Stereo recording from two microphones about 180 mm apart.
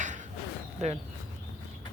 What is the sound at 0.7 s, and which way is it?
Speech, 40° right (ahead or behind).